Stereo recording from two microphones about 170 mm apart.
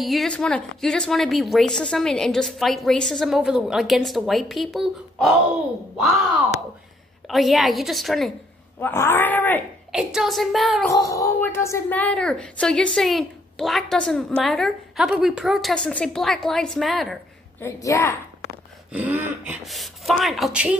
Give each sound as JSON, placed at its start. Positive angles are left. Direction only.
{"t": 0.0, "sound": "speech", "side_deg": 0}
{"t": 7.2, "sound": "speech", "side_deg": 0}
{"t": 8.7, "sound": "speech", "side_deg": 15}
{"t": 9.9, "sound": "speech", "side_deg": 0}
{"t": 10.9, "sound": "speech", "side_deg": 20}
{"t": 17.6, "sound": "speech", "side_deg": 15}
{"t": 18.9, "sound": "dog", "side_deg": -10}
{"t": 19.6, "sound": "speech", "side_deg": 0}